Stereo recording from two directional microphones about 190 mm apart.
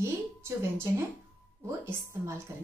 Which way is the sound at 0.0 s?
15° right (ahead or behind).